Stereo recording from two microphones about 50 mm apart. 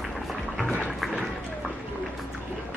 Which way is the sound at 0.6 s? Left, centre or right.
Left.